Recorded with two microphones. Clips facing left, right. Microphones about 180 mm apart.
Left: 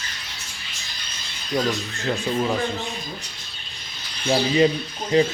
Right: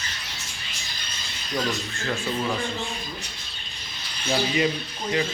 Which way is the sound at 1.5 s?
20° left (ahead or behind).